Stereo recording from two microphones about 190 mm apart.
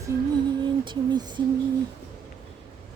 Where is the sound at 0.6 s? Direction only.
20° right (ahead or behind).